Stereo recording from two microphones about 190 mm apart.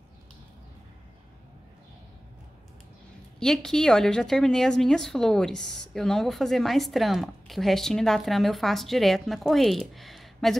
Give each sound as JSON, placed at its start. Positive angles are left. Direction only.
{"t": 3.3, "sound": "a woman's voice", "side_deg": 5}